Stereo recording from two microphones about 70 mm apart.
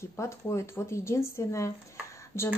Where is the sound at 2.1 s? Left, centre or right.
Left.